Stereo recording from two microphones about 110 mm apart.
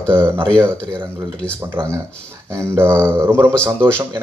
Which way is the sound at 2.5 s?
25° right (ahead or behind).